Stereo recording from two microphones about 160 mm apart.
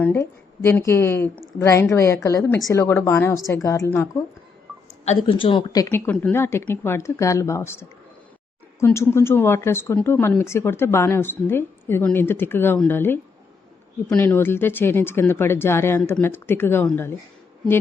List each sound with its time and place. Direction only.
0.0 s a woman's voice: 15° left (ahead or behind)
5.0 s speech: 35° left (ahead or behind)
6.1 s speech: 10° left (ahead or behind)